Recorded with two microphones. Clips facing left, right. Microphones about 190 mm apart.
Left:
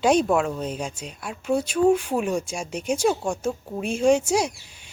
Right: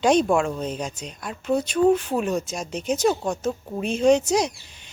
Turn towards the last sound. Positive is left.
turn(degrees=10)  # may be behind; listen again after turning